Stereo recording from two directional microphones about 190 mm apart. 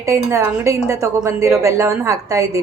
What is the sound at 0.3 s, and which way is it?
A woman's voice, 15° right (ahead or behind).